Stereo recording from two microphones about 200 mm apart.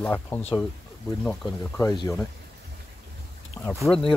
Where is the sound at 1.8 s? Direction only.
15° left (ahead or behind).